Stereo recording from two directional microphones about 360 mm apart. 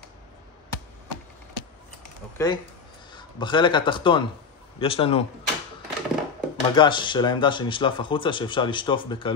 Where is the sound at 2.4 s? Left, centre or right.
Centre.